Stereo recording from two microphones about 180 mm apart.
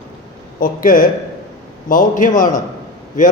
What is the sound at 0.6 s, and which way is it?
A man's voice, 50° left (ahead or behind).